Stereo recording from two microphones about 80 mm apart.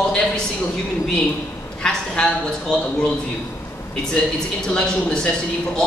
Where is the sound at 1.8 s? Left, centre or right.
Centre.